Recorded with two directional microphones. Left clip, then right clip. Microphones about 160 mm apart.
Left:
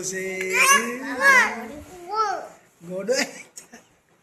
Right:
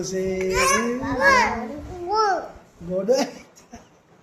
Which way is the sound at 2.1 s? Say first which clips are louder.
Right 4 dB; 50° right (ahead or behind).